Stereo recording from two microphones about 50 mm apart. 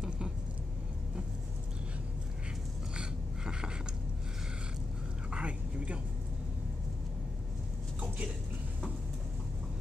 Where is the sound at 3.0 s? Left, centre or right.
Centre.